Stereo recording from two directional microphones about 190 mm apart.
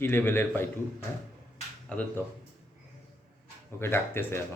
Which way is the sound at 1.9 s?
10° left (ahead or behind).